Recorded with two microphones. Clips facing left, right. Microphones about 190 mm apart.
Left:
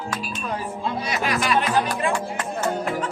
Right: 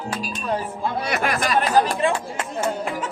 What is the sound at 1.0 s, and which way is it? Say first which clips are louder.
Speech: even; 55° right (ahead or behind).